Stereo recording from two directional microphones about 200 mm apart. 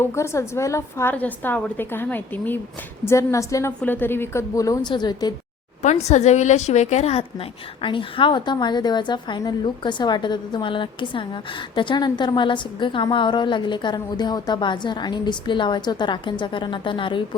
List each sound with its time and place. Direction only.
0.0 s a woman's voice: 15° left (ahead or behind)
5.8 s a woman's voice: 35° left (ahead or behind)